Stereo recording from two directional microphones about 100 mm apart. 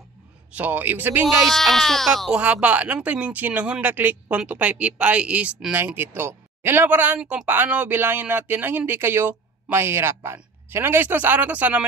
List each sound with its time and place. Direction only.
0.5 s speech: 15° right (ahead or behind)
1.5 s speech: centre (ahead or behind)
2.4 s speech: 15° right (ahead or behind)
7.4 s speech: 20° right (ahead or behind)